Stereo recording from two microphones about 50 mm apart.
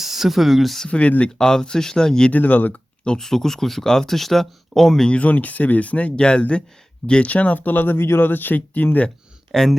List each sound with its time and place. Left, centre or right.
0.0 s speech: centre
0.9 s speech: left
1.4 s speech: centre
2.3 s speech: left
3.0 s speech: centre
5.2 s speech: left
8.0 s speech: left
9.5 s speech: centre